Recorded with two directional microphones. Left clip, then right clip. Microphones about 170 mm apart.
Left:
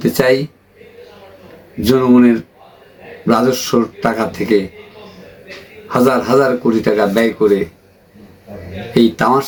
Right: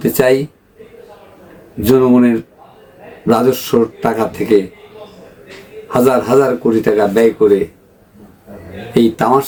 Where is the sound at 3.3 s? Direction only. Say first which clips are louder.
Right 1 dB; 15° right (ahead or behind).